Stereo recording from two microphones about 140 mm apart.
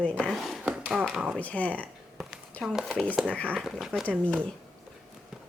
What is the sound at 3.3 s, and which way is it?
Speech, 10° left (ahead or behind).